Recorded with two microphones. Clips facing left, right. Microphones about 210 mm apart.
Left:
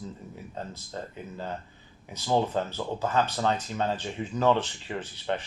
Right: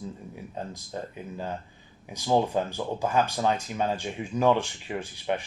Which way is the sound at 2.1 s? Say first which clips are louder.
Right 2 dB; 15° right (ahead or behind).